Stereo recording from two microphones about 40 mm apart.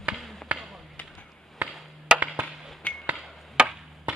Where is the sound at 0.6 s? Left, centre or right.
Centre.